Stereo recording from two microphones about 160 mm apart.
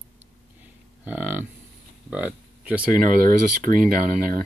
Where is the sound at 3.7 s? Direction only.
60° right (ahead or behind).